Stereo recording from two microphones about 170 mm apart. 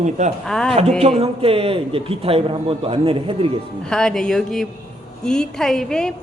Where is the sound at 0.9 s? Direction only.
40° right (ahead or behind).